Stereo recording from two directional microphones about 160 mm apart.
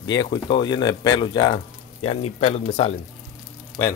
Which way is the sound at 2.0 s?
40° left (ahead or behind).